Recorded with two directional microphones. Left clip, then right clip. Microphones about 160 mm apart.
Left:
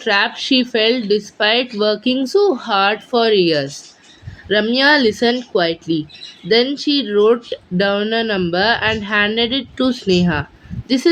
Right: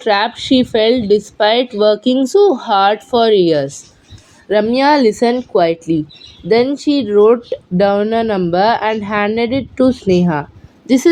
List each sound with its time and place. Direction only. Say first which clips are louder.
0.0 s a woman's voice: right 2 dB; 40° right (ahead or behind)